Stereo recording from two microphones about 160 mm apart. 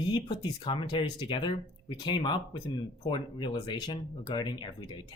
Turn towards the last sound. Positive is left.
turn(degrees=30)  # may be behind; listen again after turning